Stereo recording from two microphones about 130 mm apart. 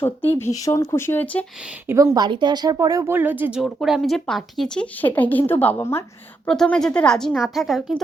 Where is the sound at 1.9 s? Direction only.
20° right (ahead or behind).